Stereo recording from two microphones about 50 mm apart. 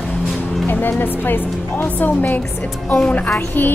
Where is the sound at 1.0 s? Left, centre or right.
Left.